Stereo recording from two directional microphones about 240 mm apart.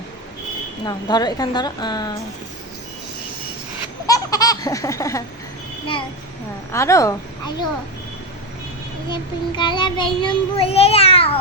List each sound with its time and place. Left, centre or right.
0.9 s a woman's voice: centre
4.0 s baby laughter: centre
6.7 s a woman's voice: centre
9.0 s child singing: centre